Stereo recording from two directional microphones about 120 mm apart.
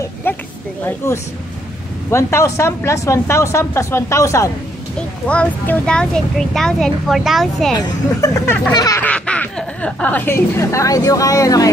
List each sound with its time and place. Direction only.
0.0 s a sound: 15° left (ahead or behind)
0.8 s speech: 25° left (ahead or behind)
4.9 s speech: 10° left (ahead or behind)
7.8 s speech: 25° left (ahead or behind)
9.0 s speech: 10° left (ahead or behind); by 11.7 s 30° left (ahead or behind)